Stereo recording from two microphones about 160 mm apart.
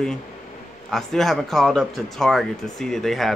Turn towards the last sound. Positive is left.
turn(degrees=0)  # may be behind; listen again after turning